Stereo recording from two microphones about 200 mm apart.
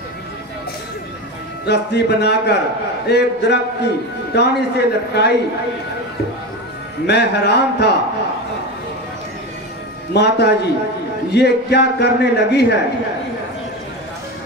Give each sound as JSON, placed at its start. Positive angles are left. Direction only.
{"t": 1.7, "sound": "a man's voice", "side_deg": 55}
{"t": 7.1, "sound": "a man's voice", "side_deg": 55}
{"t": 10.1, "sound": "a man's voice", "side_deg": 55}